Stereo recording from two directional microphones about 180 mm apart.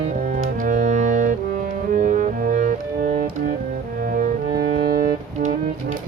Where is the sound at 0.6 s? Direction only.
45° right (ahead or behind).